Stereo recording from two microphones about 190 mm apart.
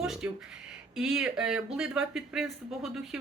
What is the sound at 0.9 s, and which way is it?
Speech, 5° right (ahead or behind).